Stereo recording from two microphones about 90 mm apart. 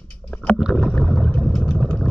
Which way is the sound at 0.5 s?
Centre (ahead or behind).